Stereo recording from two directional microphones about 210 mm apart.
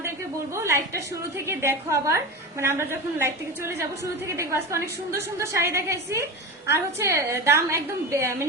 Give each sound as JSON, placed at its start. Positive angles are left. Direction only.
{"t": 0.5, "sound": "a woman's voice", "side_deg": -15}